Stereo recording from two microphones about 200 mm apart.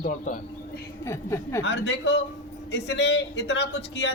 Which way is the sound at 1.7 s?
65° left (ahead or behind).